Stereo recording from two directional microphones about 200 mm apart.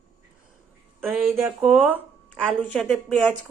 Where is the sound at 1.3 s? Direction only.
10° right (ahead or behind).